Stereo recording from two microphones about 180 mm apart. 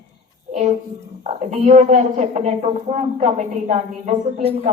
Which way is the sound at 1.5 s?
40° right (ahead or behind).